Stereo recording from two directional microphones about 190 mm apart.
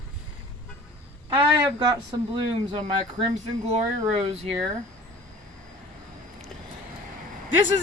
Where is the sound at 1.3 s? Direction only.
20° right (ahead or behind).